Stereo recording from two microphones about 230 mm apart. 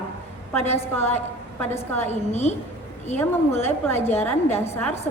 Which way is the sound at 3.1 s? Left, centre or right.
Centre.